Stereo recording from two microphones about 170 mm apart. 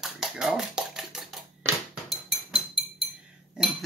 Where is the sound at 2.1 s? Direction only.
Centre (ahead or behind).